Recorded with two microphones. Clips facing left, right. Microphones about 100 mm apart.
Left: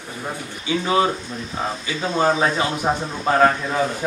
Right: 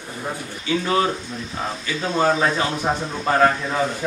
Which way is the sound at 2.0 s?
Centre (ahead or behind).